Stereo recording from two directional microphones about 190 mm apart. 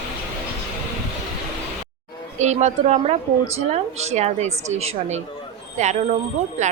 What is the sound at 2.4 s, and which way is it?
A woman's voice, 40° right (ahead or behind).